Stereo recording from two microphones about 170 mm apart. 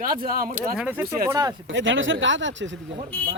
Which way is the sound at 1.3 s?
20° right (ahead or behind).